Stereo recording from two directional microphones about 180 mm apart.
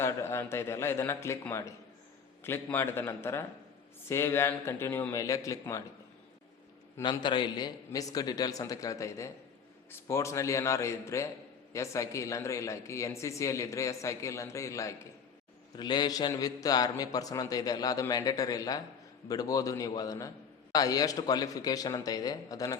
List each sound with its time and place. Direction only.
0.0 s speech: 15° left (ahead or behind)
7.0 s a man's voice: 25° left (ahead or behind)